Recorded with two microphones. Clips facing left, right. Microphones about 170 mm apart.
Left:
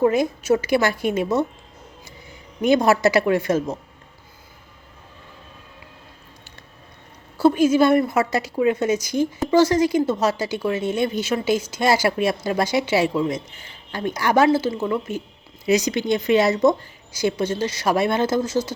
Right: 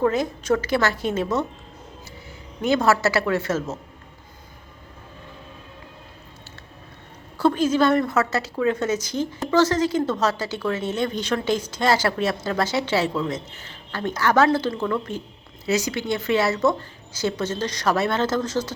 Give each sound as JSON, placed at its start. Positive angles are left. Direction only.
{"t": 0.1, "sound": "a woman's voice", "side_deg": 10}
{"t": 2.6, "sound": "a woman's voice", "side_deg": 15}
{"t": 7.3, "sound": "a woman's voice", "side_deg": 10}
{"t": 14.7, "sound": "a woman's voice", "side_deg": 25}
{"t": 14.9, "sound": "a woman's voice", "side_deg": 10}